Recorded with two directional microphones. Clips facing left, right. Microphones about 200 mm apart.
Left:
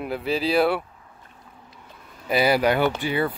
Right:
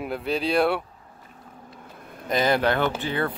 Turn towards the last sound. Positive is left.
turn(degrees=10)  # may be behind; listen again after turning